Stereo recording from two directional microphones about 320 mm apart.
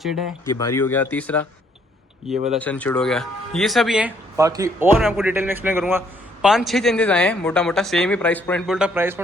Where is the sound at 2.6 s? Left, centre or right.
Centre.